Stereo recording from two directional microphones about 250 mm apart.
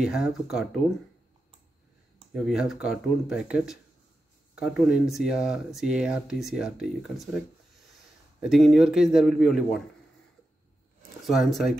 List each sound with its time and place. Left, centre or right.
0.0 s speech: centre
2.3 s speech: centre
8.4 s speech: centre
11.0 s speech: centre